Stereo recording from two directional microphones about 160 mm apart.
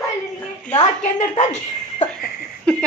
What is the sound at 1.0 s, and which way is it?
Speech, 55° left (ahead or behind).